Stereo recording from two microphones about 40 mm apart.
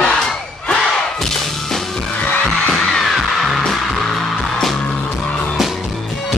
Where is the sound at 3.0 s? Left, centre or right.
Centre.